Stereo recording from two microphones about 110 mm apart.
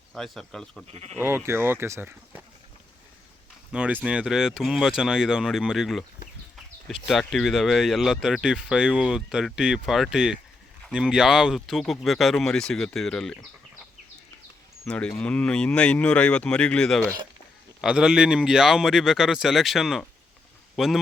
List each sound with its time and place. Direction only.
0.1 s speech: centre (ahead or behind)
0.9 s speech: 70° right (ahead or behind)
1.2 s speech: 25° right (ahead or behind)
3.7 s speech: 10° right (ahead or behind); by 13.4 s 5° left (ahead or behind)
14.8 s speech: 10° left (ahead or behind)
17.7 s speech: 5° right (ahead or behind)